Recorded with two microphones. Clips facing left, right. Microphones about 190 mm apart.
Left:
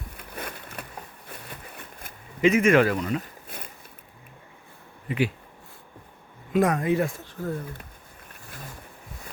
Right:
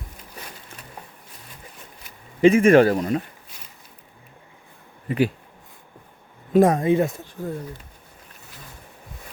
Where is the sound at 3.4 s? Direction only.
55° left (ahead or behind).